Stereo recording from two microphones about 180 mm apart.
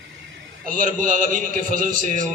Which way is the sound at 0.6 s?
45° right (ahead or behind).